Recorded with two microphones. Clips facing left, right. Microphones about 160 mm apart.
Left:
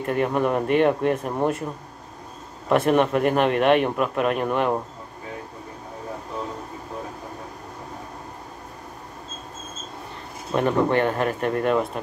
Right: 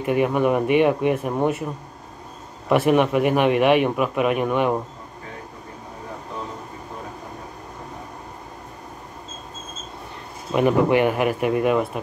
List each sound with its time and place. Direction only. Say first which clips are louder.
0.0 s a man's voice: right 3 dB; 5° right (ahead or behind)
2.7 s a man's voice: right 1 dB; 5° right (ahead or behind)
10.5 s speech: right 3 dB; 10° right (ahead or behind)